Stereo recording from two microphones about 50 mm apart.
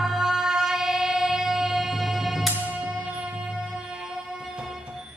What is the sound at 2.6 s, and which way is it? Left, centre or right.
Music, right.